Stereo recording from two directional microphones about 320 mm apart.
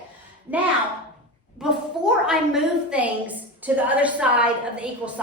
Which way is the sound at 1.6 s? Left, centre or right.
Centre.